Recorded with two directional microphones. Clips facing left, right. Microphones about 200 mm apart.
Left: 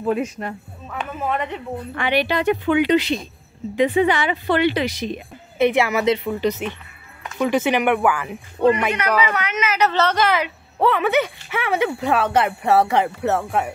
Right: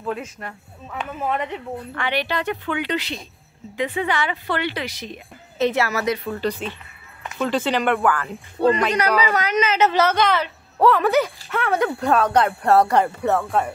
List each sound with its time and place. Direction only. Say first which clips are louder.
0.0 s speech: left 7 dB; 15° left (ahead or behind)
2.0 s speech: left 5 dB; 15° left (ahead or behind)
8.9 s speech: right 1 dB; 35° right (ahead or behind)
9.8 s speech: even; 20° right (ahead or behind)
10.0 s speech: even; centre (ahead or behind)